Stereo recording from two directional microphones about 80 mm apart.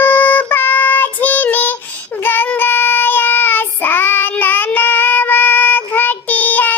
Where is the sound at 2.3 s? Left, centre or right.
Left.